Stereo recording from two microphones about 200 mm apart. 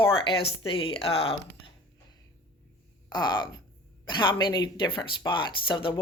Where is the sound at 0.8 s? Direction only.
25° left (ahead or behind).